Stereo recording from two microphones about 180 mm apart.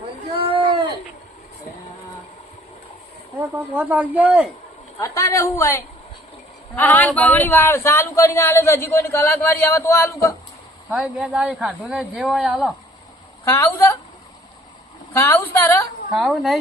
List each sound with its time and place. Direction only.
0.3 s a sound: 30° right (ahead or behind)
3.4 s speech: 10° right (ahead or behind)
4.9 s a man's voice: 15° left (ahead or behind)
10.8 s speech: 5° right (ahead or behind)
13.4 s a man's voice: 15° left (ahead or behind)
15.1 s a man's voice: 15° left (ahead or behind)
16.1 s speech: centre (ahead or behind)